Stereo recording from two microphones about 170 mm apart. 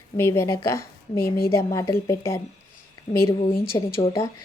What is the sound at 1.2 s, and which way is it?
Speech, 60° left (ahead or behind).